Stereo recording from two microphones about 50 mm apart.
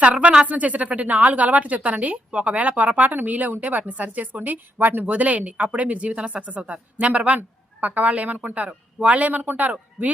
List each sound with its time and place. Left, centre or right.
0.0 s speech: right
5.0 s speech: right